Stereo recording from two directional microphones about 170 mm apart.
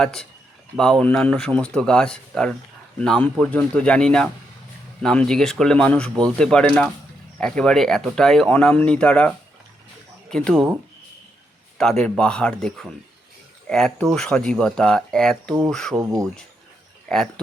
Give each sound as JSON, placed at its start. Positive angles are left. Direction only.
{"t": 0.0, "sound": "speech", "side_deg": 5}
{"t": 11.8, "sound": "speech", "side_deg": 0}
{"t": 16.0, "sound": "speech", "side_deg": -20}
{"t": 17.1, "sound": "speech", "side_deg": 5}